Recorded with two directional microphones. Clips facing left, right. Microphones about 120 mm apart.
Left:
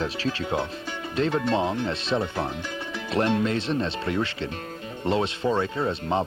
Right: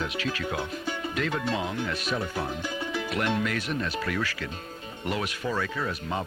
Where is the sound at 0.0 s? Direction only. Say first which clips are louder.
Left 3 dB; 30° left (ahead or behind).